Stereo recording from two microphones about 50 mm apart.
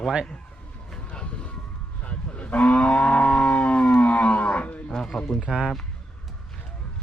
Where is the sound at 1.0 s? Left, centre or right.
Left.